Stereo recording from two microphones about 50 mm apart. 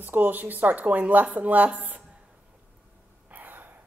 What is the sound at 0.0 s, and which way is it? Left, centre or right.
Speech, right.